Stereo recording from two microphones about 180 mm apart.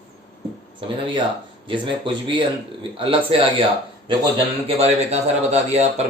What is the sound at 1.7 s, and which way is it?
Speech, 30° right (ahead or behind).